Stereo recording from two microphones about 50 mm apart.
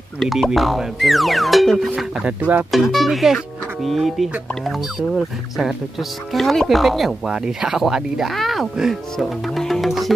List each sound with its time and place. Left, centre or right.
0.2 s speech: centre
2.2 s speech: right
2.7 s speech: centre
6.3 s speech: centre
7.2 s speech: centre
7.8 s speech: centre
9.1 s music: centre